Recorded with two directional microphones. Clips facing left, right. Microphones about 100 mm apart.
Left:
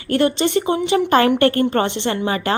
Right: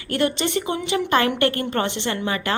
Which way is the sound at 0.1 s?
30° left (ahead or behind).